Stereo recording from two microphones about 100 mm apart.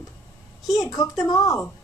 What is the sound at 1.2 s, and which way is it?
Speech, 40° left (ahead or behind).